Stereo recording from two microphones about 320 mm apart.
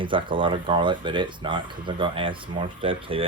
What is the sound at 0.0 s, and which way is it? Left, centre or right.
Speech, centre.